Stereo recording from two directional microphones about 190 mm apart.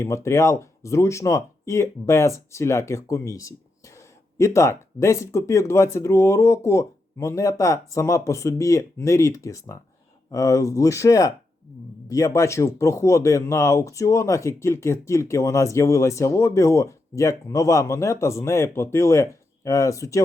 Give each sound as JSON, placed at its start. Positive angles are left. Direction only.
{"t": 0.0, "sound": "speech", "side_deg": 15}